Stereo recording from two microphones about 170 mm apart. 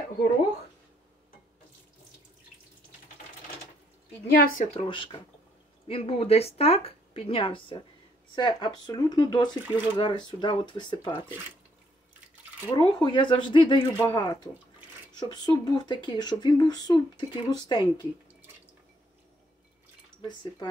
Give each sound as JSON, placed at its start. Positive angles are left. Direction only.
{"t": 4.7, "sound": "speech", "side_deg": 30}
{"t": 12.6, "sound": "speech", "side_deg": 25}
{"t": 20.2, "sound": "speech", "side_deg": 25}